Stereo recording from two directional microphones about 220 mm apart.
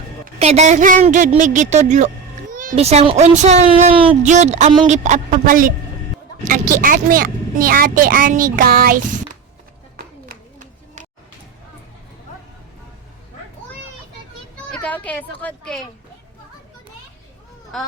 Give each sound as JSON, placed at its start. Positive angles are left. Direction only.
{"t": 0.3, "sound": "a child's voice", "side_deg": -30}
{"t": 14.7, "sound": "speech", "side_deg": 5}